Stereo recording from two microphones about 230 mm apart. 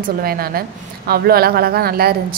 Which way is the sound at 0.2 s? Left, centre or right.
Right.